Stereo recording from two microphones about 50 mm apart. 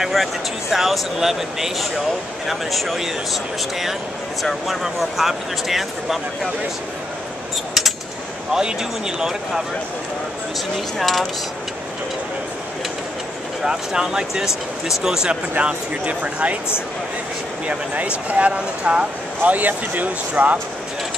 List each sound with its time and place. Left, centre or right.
0.1 s speech: centre
4.4 s speech: centre
8.5 s speech: centre
11.0 s speech: centre
13.7 s speech: centre
15.5 s speech: right
17.6 s speech: right